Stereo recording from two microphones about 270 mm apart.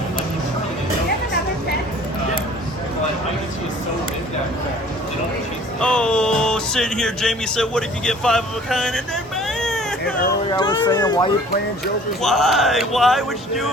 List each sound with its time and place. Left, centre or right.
5.8 s speech: centre
9.6 s a sound: centre
10.5 s speech: centre
12.2 s speech: centre